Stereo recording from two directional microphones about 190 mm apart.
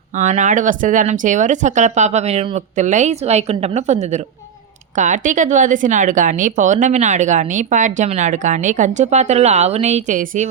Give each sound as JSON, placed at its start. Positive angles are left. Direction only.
{"t": 0.1, "sound": "a woman's voice", "side_deg": -40}